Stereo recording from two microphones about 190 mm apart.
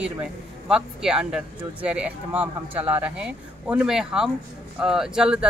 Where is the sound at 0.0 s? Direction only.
5° right (ahead or behind).